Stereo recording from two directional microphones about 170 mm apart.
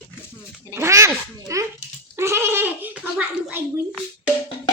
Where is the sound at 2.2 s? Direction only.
15° right (ahead or behind).